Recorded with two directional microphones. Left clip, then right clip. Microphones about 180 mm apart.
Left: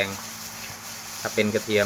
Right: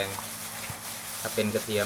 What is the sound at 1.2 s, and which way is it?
Speech, 30° left (ahead or behind).